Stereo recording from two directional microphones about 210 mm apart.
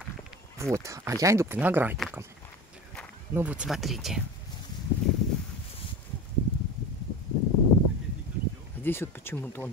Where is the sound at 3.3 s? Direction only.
10° right (ahead or behind).